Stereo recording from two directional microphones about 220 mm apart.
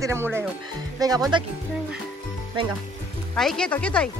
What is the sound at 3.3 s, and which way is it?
Speech, centre (ahead or behind).